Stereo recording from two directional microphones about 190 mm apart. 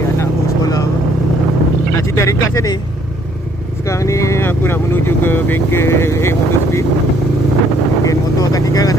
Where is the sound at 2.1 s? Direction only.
15° left (ahead or behind).